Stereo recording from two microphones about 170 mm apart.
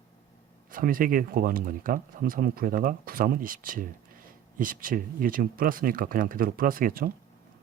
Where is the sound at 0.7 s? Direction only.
55° right (ahead or behind).